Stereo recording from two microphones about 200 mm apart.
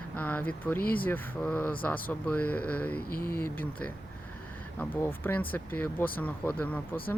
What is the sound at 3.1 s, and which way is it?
Speech, 50° left (ahead or behind).